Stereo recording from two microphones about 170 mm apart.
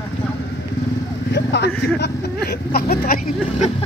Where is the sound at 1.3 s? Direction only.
80° left.